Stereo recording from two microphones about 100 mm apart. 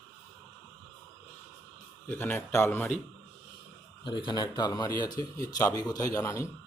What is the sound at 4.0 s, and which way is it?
A man's voice, 55° left (ahead or behind).